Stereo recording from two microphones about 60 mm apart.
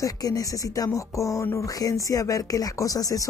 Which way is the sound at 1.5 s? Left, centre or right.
Left.